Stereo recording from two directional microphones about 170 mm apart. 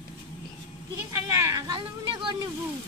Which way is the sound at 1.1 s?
20° right (ahead or behind).